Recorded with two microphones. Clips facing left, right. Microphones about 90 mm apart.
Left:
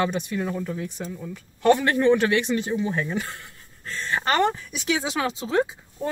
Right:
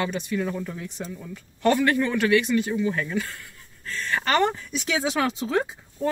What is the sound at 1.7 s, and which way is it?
Speech, 20° left (ahead or behind).